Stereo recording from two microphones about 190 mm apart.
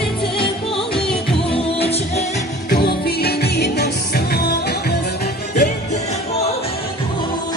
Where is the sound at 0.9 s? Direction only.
5° left (ahead or behind).